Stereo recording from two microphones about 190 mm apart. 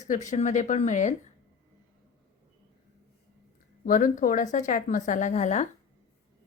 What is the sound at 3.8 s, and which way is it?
A woman's voice, 45° left (ahead or behind).